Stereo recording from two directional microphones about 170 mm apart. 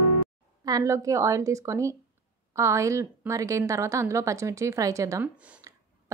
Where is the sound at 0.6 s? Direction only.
20° right (ahead or behind).